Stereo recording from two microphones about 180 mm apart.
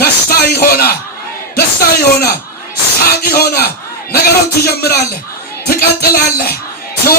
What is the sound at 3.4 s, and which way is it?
Music, 60° left (ahead or behind).